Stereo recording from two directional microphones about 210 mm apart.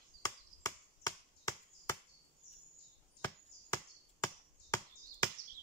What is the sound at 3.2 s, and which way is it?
Chop, 15° left (ahead or behind).